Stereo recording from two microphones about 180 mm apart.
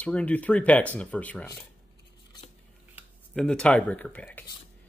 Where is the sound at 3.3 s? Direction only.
5° left (ahead or behind).